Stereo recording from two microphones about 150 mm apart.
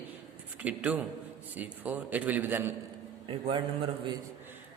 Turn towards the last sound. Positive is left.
turn(degrees=-35)  # may be behind; listen again after turning